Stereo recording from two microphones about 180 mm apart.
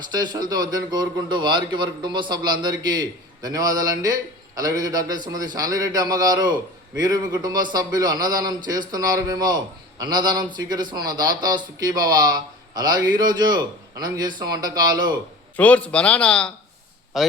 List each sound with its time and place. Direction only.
0.2 s a man's voice: 25° right (ahead or behind)
15.5 s a man's voice: 10° left (ahead or behind)